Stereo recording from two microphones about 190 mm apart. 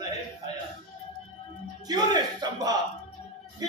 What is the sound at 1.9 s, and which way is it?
Speech, 20° right (ahead or behind).